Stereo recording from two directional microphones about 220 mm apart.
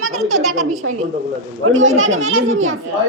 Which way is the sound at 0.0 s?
70° right (ahead or behind).